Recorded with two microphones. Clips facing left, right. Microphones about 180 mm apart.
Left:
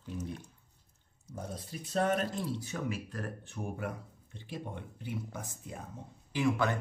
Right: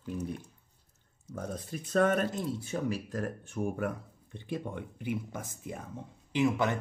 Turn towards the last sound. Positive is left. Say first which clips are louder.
# right 2 dB
turn(degrees=-20)  # may be behind; listen again after turning